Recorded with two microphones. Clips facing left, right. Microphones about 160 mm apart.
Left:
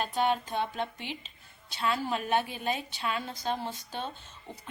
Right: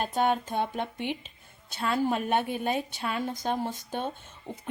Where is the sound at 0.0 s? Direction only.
50° right (ahead or behind).